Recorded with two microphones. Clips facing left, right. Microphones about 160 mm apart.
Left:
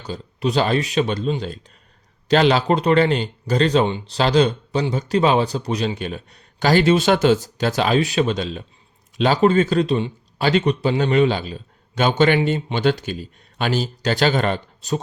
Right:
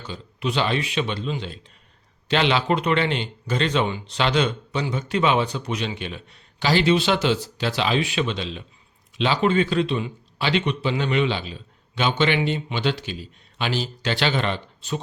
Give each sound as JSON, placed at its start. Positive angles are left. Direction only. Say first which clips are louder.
{"t": 0.0, "sound": "a man's voice", "louder": "left 5 dB", "side_deg": 40}